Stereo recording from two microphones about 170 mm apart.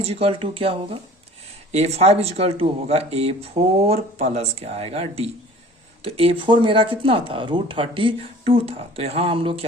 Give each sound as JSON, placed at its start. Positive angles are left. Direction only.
{"t": 0.0, "sound": "speech", "side_deg": -35}